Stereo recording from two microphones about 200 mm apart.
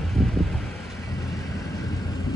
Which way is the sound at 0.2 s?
Centre (ahead or behind).